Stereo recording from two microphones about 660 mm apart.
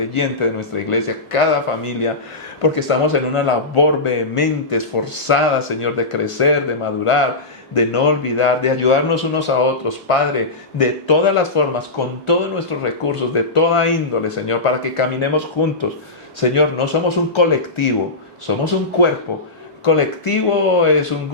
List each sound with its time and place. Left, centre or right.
0.1 s speech: left